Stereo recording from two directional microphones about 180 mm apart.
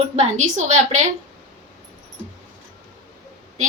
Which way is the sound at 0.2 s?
40° right (ahead or behind).